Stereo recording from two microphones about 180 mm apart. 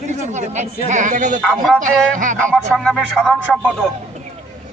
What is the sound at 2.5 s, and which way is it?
A man's voice, centre (ahead or behind).